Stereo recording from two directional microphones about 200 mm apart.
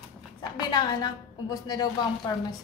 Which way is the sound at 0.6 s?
20° left (ahead or behind).